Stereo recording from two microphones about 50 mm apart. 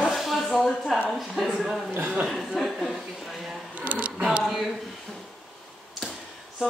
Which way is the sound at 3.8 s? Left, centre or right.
Right.